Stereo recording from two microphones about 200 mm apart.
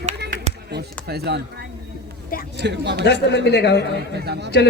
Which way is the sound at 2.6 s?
60° right (ahead or behind).